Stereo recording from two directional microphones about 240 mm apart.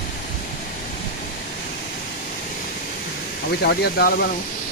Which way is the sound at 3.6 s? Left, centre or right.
Left.